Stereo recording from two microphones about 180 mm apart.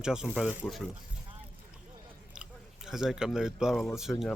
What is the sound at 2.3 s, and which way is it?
Speech, 5° right (ahead or behind).